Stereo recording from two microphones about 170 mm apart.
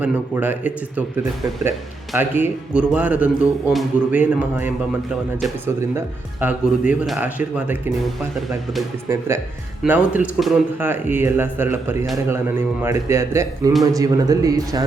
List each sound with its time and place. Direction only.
0.0 s speech: 10° right (ahead or behind)
2.1 s speech: 10° right (ahead or behind)
9.0 s speech: 15° right (ahead or behind)